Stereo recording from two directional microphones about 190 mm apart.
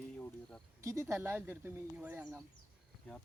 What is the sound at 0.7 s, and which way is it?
Speech, 15° right (ahead or behind).